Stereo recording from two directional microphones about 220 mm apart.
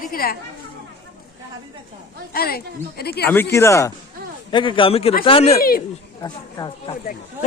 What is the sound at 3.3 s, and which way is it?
A man's voice, 10° left (ahead or behind).